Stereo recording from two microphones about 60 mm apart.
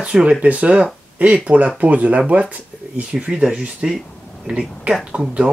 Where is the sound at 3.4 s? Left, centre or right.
Centre.